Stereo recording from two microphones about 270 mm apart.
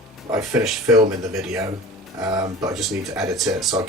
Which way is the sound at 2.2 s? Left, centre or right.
Centre.